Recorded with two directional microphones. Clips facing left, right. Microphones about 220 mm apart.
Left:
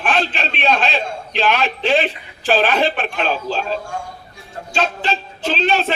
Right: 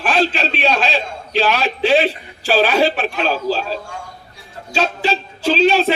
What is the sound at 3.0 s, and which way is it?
Speech, 40° right (ahead or behind).